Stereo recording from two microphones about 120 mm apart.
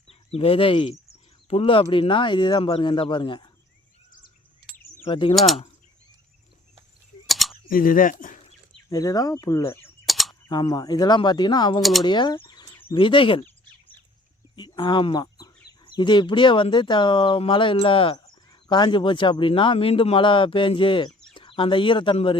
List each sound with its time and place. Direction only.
0.1 s speech: 55° left (ahead or behind)
5.0 s speech: 45° left (ahead or behind)
7.3 s mechanisms: centre (ahead or behind)
8.0 s speech: 90° left
8.9 s speech: 30° left (ahead or behind)
10.1 s a sound: centre (ahead or behind)
10.5 s speech: 35° left (ahead or behind)
11.8 s speech: centre (ahead or behind)
12.0 s speech: 40° left (ahead or behind)
14.5 s speech: 35° left (ahead or behind)